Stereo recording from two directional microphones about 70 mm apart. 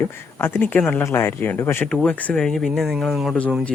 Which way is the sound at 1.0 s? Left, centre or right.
Left.